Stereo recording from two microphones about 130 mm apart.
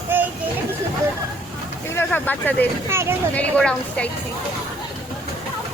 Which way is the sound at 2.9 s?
20° right (ahead or behind).